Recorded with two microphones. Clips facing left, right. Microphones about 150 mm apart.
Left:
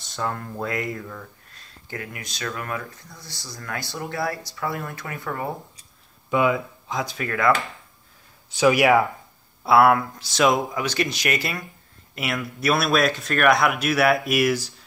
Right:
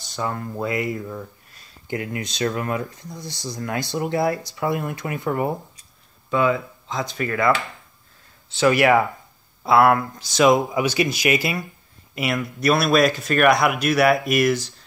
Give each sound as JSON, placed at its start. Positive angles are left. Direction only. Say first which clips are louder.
{"t": 0.0, "sound": "speech", "louder": "right 2 dB", "side_deg": 0}
{"t": 6.3, "sound": "speech", "louder": "right 1 dB", "side_deg": 10}
{"t": 8.5, "sound": "speech", "louder": "right 1 dB", "side_deg": 10}